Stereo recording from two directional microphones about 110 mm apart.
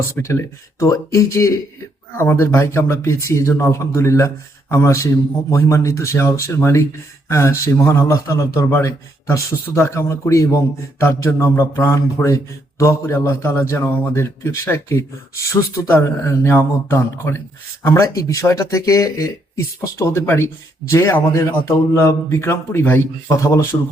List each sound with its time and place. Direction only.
0.1 s a man's voice: 25° left (ahead or behind)